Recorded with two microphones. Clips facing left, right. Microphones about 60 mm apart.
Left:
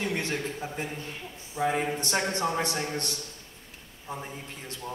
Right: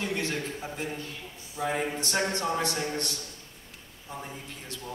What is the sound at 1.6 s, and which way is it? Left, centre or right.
Speech, centre.